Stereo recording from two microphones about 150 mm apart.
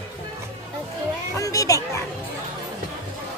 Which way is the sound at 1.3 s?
20° left (ahead or behind).